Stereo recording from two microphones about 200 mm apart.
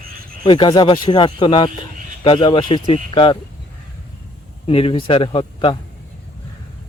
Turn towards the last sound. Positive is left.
turn(degrees=25)  # may be behind; listen again after turning